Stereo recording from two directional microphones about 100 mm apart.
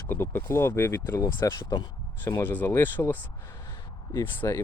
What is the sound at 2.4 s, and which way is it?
Speech, 20° left (ahead or behind).